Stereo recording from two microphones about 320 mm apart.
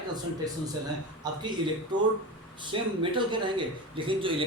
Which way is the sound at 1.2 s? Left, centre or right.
Centre.